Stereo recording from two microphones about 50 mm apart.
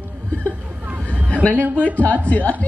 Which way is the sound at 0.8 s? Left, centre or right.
Right.